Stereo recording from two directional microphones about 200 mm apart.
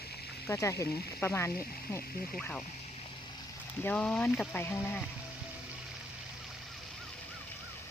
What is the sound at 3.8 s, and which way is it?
Speech, 5° left (ahead or behind).